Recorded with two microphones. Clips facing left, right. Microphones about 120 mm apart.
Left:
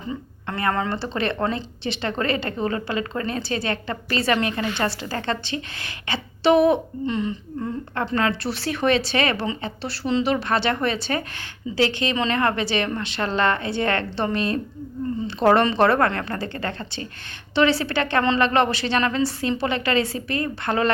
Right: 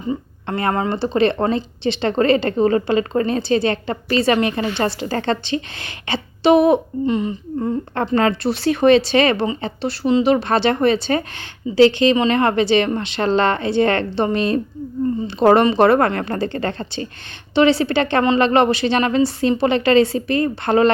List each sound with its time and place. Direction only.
0.1 s speech: 30° right (ahead or behind)
7.6 s a woman's voice: 30° right (ahead or behind)